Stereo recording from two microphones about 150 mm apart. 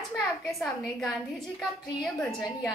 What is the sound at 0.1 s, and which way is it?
A woman's voice, centre (ahead or behind).